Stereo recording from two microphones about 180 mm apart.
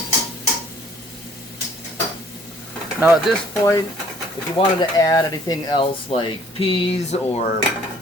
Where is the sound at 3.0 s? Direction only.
5° right (ahead or behind).